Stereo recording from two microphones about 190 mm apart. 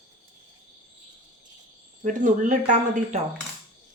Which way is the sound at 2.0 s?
40° right (ahead or behind).